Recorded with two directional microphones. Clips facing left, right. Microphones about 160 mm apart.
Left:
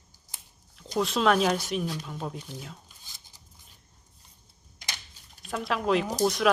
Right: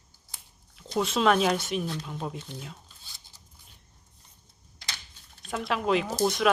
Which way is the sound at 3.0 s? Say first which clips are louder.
Even; 15° left (ahead or behind).